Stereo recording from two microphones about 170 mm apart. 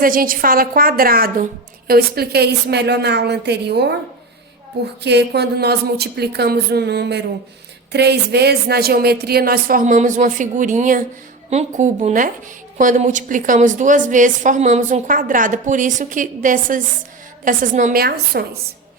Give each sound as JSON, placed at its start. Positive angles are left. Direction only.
{"t": 0.0, "sound": "a woman's voice", "side_deg": -55}
{"t": 5.0, "sound": "a woman's voice", "side_deg": -80}